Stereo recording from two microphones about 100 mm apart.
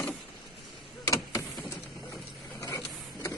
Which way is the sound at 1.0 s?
35° left (ahead or behind).